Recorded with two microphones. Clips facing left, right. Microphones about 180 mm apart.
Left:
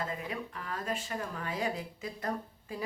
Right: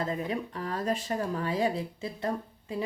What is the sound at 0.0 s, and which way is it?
Speech, 35° right (ahead or behind).